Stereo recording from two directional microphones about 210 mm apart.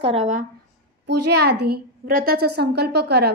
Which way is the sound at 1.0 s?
50° right (ahead or behind).